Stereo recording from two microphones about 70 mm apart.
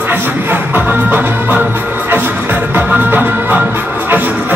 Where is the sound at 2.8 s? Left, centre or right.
Right.